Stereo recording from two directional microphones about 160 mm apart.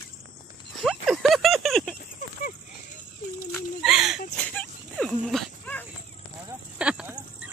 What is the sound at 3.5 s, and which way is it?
Speech, 5° right (ahead or behind).